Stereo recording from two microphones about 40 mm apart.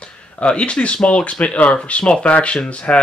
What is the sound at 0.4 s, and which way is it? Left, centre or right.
Speech, left.